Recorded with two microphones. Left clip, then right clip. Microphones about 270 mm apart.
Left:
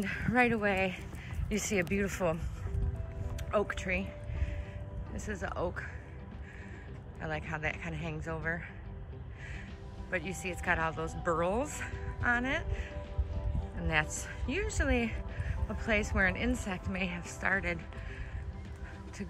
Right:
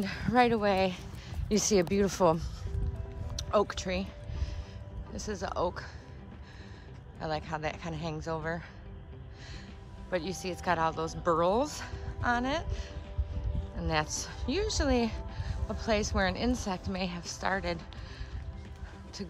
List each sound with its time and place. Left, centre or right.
0.0 s a woman's voice: centre
5.1 s a woman's voice: centre
7.2 s a woman's voice: centre
10.1 s a woman's voice: centre
13.7 s a woman's voice: centre